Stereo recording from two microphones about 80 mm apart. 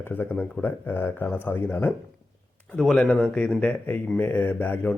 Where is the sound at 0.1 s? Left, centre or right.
Left.